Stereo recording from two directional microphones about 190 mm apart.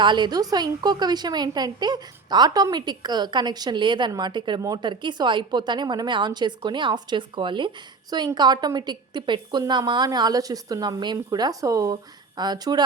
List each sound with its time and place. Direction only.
0.0 s a woman's voice: 25° right (ahead or behind)